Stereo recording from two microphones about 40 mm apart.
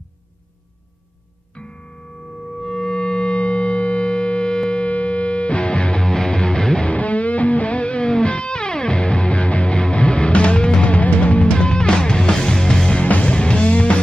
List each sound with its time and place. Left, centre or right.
1.5 s music: left
2.5 s music: centre
4.7 s music: left
6.0 s music: centre
6.9 s music: left; by 13.0 s centre
13.0 s music: left